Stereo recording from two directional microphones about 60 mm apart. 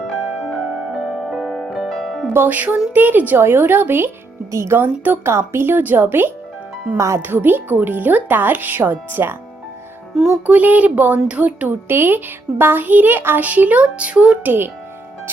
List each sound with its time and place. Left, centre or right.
0.9 s music: centre
2.3 s speech: right
4.5 s a child's voice: right
4.8 s speech: right
6.9 s a child's voice: right
7.2 s speech: right
10.2 s music: centre
10.4 s speech: right
11.9 s speech: right; by 14.3 s centre
14.4 s speech: right